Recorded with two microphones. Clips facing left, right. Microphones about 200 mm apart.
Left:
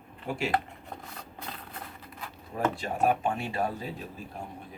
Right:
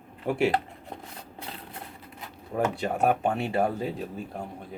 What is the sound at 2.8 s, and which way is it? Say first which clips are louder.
Speech: right 2 dB; 65° right (ahead or behind).